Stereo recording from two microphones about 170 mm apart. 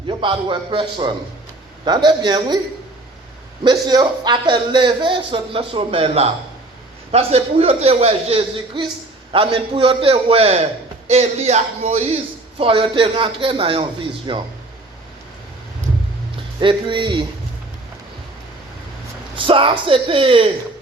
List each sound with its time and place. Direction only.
0.1 s a man's voice: 30° right (ahead or behind)
3.6 s a man's voice: 25° right (ahead or behind)
16.6 s a man's voice: 30° right (ahead or behind)
19.5 s a man's voice: 30° right (ahead or behind)